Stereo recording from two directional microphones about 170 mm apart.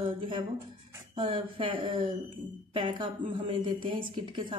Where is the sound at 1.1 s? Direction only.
30° right (ahead or behind).